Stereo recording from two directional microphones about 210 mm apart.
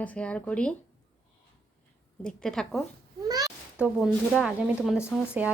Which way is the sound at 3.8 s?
5° right (ahead or behind).